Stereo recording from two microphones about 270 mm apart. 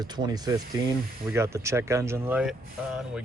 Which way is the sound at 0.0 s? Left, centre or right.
Centre.